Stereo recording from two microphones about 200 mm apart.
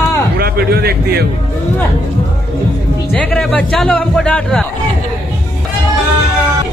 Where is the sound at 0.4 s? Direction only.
50° right (ahead or behind).